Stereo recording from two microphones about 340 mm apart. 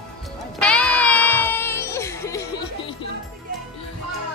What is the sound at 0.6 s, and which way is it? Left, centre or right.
Music, centre.